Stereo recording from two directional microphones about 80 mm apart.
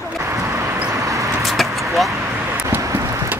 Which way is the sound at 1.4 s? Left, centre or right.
Centre.